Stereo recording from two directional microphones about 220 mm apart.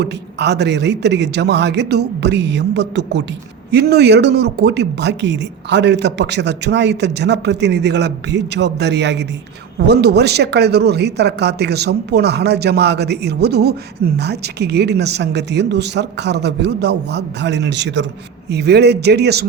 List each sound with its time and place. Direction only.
0.0 s speech: 50° right (ahead or behind)